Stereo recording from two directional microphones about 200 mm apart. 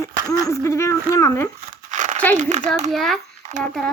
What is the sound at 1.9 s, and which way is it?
Crumpling, 40° right (ahead or behind).